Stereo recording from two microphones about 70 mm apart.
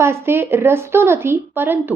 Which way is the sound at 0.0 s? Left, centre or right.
Right.